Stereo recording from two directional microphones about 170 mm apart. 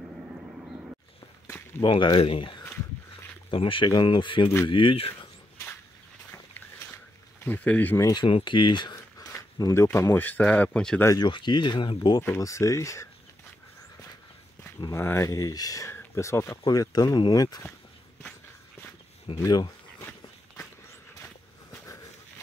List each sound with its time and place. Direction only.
1.8 s speech: 30° left (ahead or behind)
7.3 s speech: 10° left (ahead or behind)
8.1 s speech: 30° left (ahead or behind); by 11.1 s 5° left (ahead or behind)
11.1 s speech: 25° left (ahead or behind)
12.2 s speech: 15° left (ahead or behind)
14.8 s speech: 15° left (ahead or behind)
19.2 s a sound: 25° left (ahead or behind)